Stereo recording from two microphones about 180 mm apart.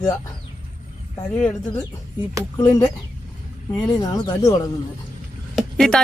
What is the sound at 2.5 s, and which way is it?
Speech, 20° left (ahead or behind).